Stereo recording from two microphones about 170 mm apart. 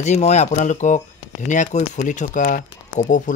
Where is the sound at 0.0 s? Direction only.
40° left (ahead or behind).